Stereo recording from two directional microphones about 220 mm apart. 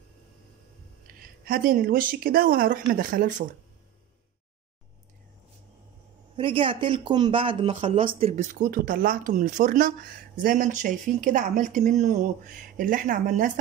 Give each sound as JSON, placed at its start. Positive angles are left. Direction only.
{"t": 1.0, "sound": "speech", "side_deg": -40}
{"t": 6.3, "sound": "speech", "side_deg": -25}